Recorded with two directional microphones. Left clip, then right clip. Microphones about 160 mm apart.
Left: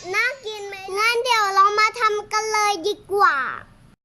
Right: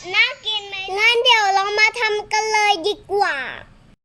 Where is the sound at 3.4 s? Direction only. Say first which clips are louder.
Left 3 dB; 90° left.